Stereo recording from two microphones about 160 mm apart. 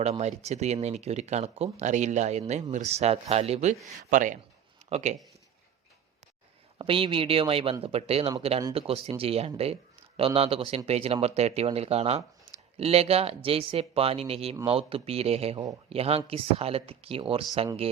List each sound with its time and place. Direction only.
0.0 s speech: 45° right (ahead or behind)
6.7 s speech: 35° right (ahead or behind)